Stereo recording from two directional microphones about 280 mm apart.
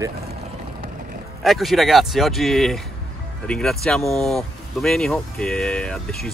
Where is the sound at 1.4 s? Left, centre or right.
Centre.